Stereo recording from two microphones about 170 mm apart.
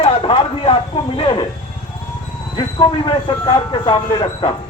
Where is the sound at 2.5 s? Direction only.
25° left (ahead or behind).